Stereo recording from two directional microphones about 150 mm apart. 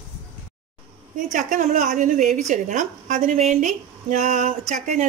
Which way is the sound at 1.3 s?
60° right (ahead or behind).